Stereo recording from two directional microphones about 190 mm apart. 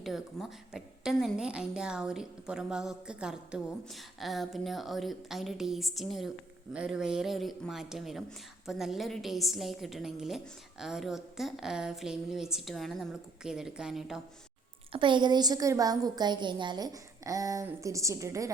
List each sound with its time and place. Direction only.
0.0 s a woman's voice: centre (ahead or behind)
14.9 s a woman's voice: 25° right (ahead or behind)